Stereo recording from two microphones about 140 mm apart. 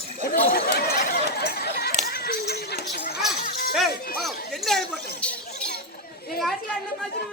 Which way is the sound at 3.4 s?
90° left.